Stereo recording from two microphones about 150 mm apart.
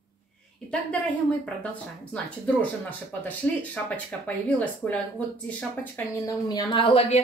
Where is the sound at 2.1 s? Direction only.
10° left (ahead or behind).